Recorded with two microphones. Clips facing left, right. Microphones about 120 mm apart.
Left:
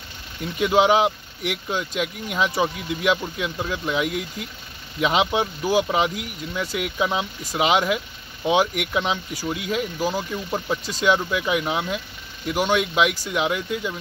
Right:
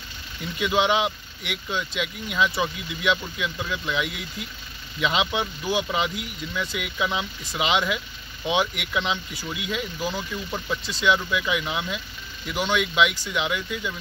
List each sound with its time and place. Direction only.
0.4 s speech: 40° left (ahead or behind)